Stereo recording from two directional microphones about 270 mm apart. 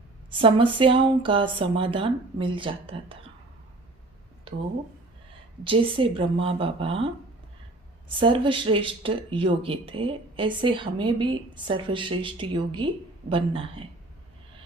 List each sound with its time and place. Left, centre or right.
0.3 s speech: centre
5.6 s speech: centre